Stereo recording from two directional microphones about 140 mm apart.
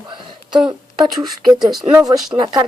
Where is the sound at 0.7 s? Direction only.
30° right (ahead or behind).